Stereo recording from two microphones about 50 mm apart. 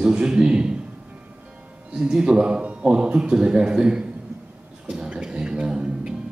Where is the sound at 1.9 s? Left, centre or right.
Centre.